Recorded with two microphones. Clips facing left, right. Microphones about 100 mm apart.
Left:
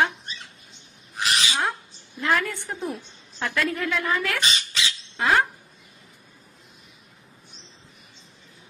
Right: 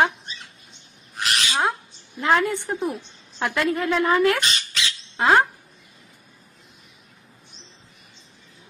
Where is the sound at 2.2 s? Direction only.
20° right (ahead or behind).